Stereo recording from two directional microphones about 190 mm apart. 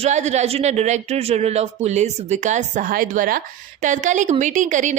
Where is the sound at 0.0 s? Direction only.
35° right (ahead or behind).